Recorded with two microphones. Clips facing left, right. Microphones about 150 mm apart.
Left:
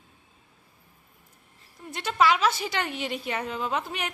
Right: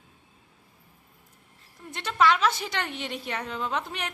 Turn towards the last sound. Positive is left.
turn(degrees=5)  # may be behind; listen again after turning